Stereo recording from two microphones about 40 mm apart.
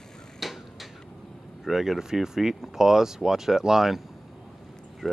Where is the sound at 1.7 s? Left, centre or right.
Centre.